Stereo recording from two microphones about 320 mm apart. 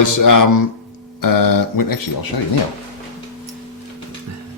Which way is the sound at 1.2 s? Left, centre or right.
Left.